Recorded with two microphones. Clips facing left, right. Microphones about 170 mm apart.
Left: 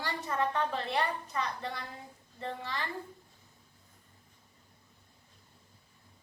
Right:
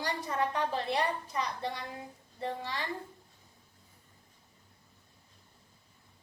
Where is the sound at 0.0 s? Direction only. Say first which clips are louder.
Even; 15° right (ahead or behind).